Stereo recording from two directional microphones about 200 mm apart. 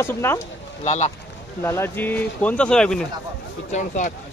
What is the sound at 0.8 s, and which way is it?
Speech, 35° left (ahead or behind).